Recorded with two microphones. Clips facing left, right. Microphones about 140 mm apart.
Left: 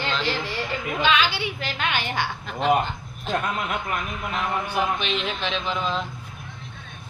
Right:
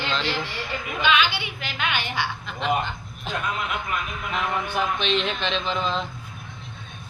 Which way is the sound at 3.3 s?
Centre (ahead or behind).